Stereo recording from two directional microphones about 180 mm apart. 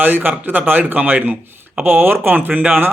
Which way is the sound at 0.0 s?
10° right (ahead or behind).